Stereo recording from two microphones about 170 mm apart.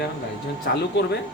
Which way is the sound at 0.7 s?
75° left (ahead or behind).